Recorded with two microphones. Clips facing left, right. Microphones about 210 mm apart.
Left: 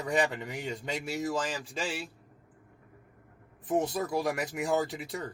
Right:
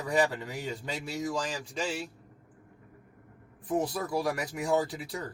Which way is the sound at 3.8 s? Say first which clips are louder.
Left 1 dB; 25° left (ahead or behind).